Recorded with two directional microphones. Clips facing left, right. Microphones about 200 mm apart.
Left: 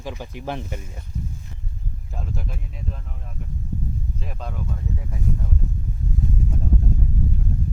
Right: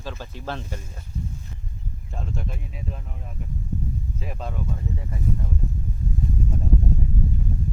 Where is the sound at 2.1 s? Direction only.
Centre (ahead or behind).